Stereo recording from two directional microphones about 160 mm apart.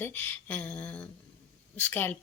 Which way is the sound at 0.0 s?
10° left (ahead or behind).